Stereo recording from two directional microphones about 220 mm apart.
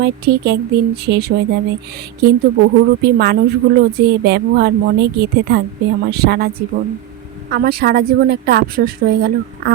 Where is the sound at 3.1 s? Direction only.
45° right (ahead or behind).